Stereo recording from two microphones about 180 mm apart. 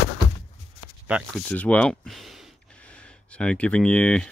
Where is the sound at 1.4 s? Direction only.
10° left (ahead or behind).